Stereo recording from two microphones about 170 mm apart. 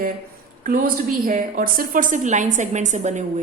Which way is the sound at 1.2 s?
50° right (ahead or behind).